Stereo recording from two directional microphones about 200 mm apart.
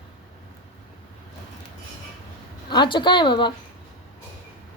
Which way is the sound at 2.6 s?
25° left (ahead or behind).